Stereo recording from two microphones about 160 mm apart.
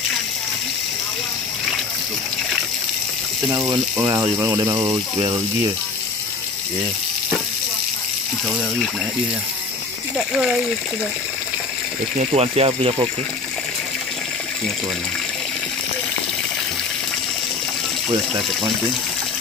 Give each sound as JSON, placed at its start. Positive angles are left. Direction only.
{"t": 3.4, "sound": "speech", "side_deg": -20}
{"t": 10.1, "sound": "speech", "side_deg": -5}
{"t": 12.2, "sound": "speech", "side_deg": -40}